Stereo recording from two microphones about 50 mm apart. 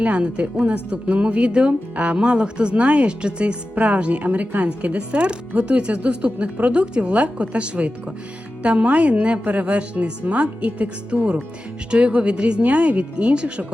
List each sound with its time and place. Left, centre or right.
0.0 s speech: right